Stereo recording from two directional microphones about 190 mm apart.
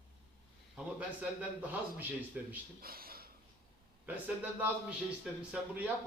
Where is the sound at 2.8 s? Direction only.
50° right (ahead or behind).